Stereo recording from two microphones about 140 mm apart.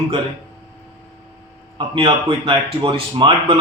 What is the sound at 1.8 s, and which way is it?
Speech, 35° right (ahead or behind).